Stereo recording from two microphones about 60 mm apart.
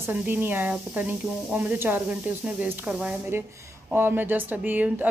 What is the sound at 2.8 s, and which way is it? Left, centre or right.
Speech, centre.